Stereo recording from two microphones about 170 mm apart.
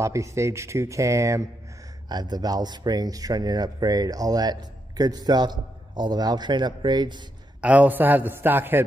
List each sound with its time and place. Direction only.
0.0 s speech: 20° right (ahead or behind)
7.6 s speech: 10° right (ahead or behind)